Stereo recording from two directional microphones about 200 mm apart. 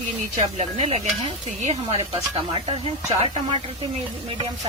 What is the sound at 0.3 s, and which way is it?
Speech, 35° right (ahead or behind).